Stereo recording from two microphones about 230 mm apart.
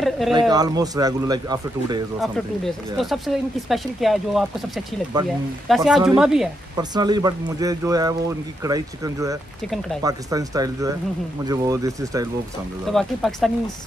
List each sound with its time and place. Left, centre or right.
0.3 s speech: centre
2.1 s speech: centre
5.9 s speech: centre
6.8 s speech: centre
9.7 s speech: centre
10.0 s speech: centre
12.9 s speech: centre